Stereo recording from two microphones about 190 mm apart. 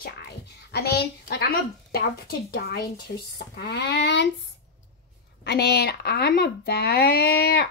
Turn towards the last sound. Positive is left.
turn(degrees=55)  # may be behind; listen again after turning